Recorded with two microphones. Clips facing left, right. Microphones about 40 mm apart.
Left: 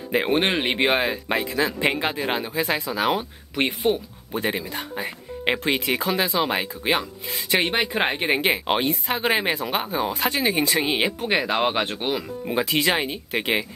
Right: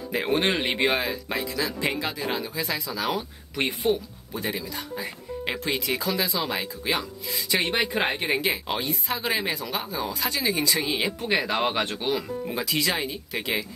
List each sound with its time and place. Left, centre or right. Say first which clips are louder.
0.1 s a man's voice: left 3 dB; left
7.8 s a man's voice: left 2 dB; left